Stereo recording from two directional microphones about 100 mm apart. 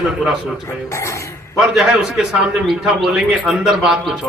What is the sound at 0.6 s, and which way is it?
Speech, 30° left (ahead or behind).